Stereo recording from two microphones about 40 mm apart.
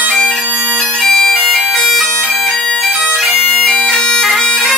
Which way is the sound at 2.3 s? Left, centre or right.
Centre.